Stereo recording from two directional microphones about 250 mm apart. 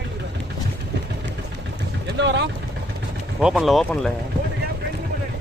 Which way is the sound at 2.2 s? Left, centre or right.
Right.